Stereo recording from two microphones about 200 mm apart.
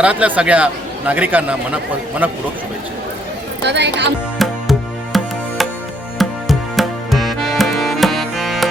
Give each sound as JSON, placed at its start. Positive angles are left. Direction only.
{"t": 0.0, "sound": "speech", "side_deg": -5}
{"t": 3.6, "sound": "speech", "side_deg": -60}
{"t": 4.4, "sound": "music", "side_deg": 0}